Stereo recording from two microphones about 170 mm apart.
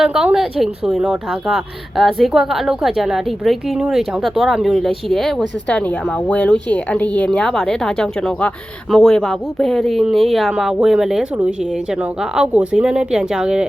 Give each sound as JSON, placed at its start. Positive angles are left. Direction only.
{"t": 0.0, "sound": "a woman's voice", "side_deg": -5}